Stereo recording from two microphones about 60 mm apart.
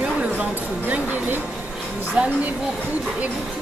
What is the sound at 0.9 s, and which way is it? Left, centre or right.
Speech, right.